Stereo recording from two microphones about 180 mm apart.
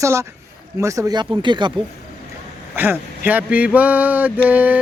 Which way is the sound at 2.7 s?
10° right (ahead or behind).